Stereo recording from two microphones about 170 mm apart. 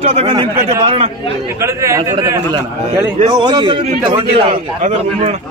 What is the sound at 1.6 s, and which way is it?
A man's voice, 20° right (ahead or behind).